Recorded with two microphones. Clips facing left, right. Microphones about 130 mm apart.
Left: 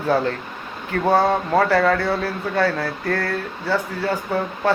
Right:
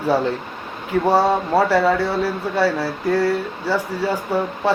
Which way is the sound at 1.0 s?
5° right (ahead or behind).